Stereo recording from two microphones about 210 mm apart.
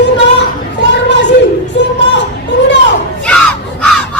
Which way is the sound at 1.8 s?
55° left (ahead or behind).